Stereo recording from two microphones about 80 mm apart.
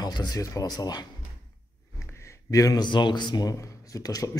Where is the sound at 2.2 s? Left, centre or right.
Left.